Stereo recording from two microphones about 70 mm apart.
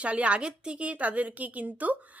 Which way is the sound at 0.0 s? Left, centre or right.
Centre.